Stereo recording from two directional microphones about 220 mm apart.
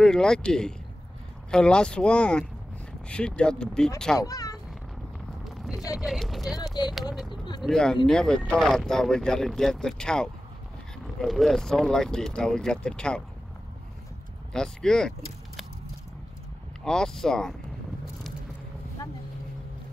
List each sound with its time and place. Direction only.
0.0 s speech: 5° left (ahead or behind)
4.2 s speech: 15° left (ahead or behind)
5.4 s a sound: centre (ahead or behind)
5.9 s speech: centre (ahead or behind)
6.6 s speech: 15° left (ahead or behind)
7.6 s speech: centre (ahead or behind)
14.5 s speech: 5° left (ahead or behind)
16.8 s speech: 5° left (ahead or behind)